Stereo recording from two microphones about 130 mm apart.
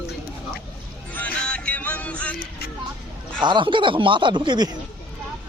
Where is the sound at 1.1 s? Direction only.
10° left (ahead or behind).